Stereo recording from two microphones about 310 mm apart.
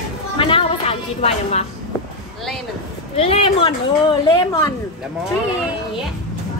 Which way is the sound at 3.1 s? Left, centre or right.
Centre.